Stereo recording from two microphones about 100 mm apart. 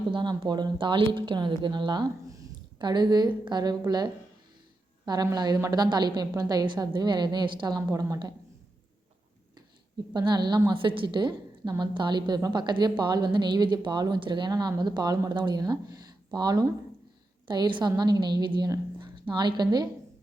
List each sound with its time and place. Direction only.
0.1 s speech: 50° right (ahead or behind)
10.2 s speech: 45° right (ahead or behind)
10.7 s a woman's voice: 60° right (ahead or behind)